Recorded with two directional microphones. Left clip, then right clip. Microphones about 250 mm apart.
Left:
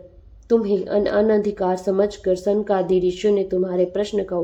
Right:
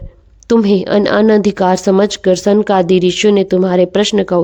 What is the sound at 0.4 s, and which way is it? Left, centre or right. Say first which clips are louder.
Speech: right 7 dB; right.